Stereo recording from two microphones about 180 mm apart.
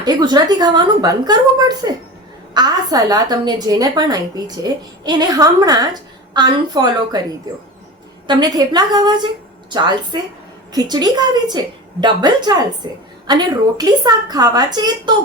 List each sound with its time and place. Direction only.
0.0 s a woman's voice: 25° right (ahead or behind)
8.3 s a woman's voice: 20° right (ahead or behind)